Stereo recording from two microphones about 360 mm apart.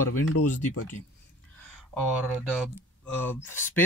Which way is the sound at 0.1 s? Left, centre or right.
Left.